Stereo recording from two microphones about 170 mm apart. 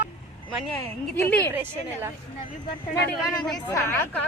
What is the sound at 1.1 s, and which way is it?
Speech, 10° left (ahead or behind).